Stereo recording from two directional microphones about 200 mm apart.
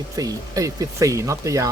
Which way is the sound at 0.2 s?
15° right (ahead or behind).